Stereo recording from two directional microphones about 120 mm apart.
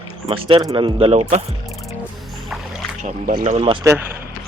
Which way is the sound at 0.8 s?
55° right (ahead or behind).